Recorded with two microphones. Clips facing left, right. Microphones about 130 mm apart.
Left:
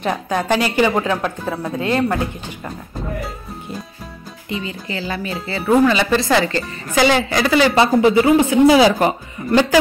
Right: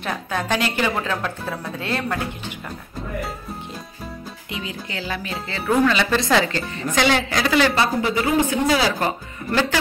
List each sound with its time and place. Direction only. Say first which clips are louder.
0.0 s speech: left 5 dB; 15° left (ahead or behind)
4.5 s speech: left 6 dB; centre (ahead or behind)
7.7 s speech: left 8 dB; 25° left (ahead or behind)
8.6 s speech: left 8 dB; 15° left (ahead or behind)